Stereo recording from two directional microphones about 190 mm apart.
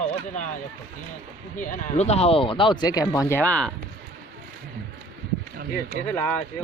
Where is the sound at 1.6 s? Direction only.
40° left (ahead or behind); by 3.7 s 5° left (ahead or behind).